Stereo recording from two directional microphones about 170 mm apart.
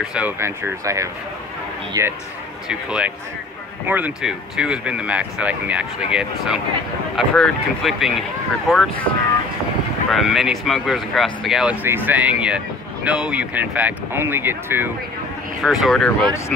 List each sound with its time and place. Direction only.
0.0 s a man's voice: 5° right (ahead or behind)
2.7 s speech: 5° right (ahead or behind)
10.1 s speech: centre (ahead or behind)
15.6 s speech: centre (ahead or behind)